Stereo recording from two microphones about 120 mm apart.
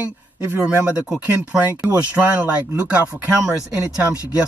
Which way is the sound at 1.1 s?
15° right (ahead or behind).